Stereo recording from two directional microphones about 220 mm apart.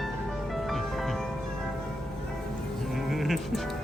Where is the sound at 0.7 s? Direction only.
Centre (ahead or behind).